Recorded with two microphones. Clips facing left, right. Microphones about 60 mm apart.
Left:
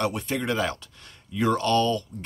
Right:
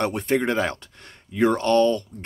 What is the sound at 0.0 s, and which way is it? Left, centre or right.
Speech, right.